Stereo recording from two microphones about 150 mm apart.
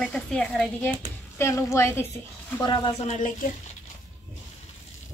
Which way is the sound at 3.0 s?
60° left (ahead or behind).